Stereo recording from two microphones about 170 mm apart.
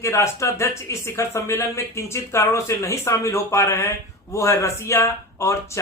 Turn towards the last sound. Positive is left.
turn(degrees=15)  # may be behind; listen again after turning